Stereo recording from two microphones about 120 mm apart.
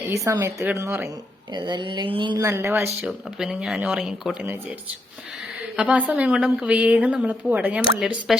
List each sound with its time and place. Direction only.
0.0 s a woman's voice: 25° right (ahead or behind)
1.5 s speech: 40° right (ahead or behind)
2.4 s a woman's voice: 20° right (ahead or behind)
3.1 s speech: 5° right (ahead or behind)
5.7 s a woman's voice: 10° right (ahead or behind)